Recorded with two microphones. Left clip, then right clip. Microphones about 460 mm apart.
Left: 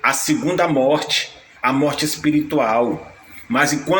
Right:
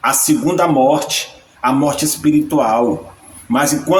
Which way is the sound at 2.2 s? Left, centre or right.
Right.